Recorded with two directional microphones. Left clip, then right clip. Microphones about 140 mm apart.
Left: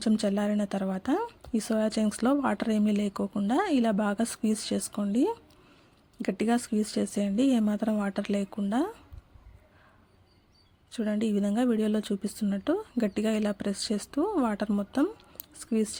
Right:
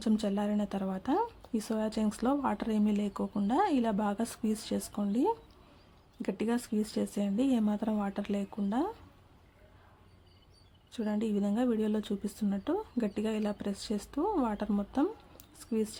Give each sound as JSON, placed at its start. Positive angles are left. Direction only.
{"t": 0.0, "sound": "a woman's voice", "side_deg": 25}
{"t": 10.9, "sound": "a woman's voice", "side_deg": 25}